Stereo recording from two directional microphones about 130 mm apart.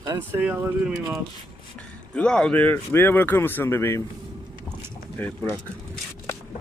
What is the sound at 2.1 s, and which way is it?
Speech, 5° left (ahead or behind).